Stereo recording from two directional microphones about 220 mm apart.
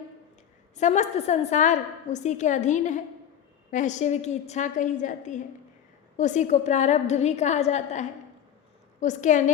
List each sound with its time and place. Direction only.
0.8 s a woman's voice: 30° left (ahead or behind)